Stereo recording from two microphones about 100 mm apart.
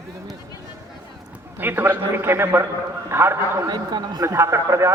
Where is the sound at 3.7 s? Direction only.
45° right (ahead or behind).